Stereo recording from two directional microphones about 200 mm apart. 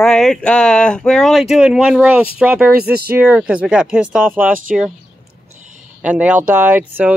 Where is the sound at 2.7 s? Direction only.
50° right (ahead or behind).